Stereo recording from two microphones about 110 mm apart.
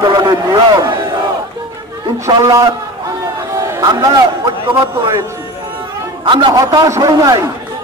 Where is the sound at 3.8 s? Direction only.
45° right (ahead or behind).